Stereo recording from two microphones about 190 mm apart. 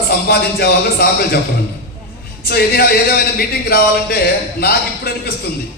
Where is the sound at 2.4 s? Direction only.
55° left (ahead or behind).